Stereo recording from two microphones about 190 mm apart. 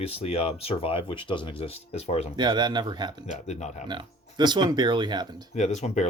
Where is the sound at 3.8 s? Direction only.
25° right (ahead or behind).